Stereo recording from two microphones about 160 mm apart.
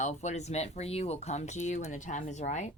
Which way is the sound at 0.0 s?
45° left (ahead or behind).